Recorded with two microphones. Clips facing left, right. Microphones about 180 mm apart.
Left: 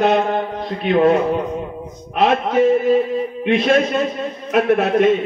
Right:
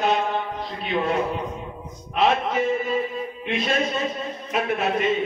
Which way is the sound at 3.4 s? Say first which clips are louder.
Left 9 dB; 60° left (ahead or behind).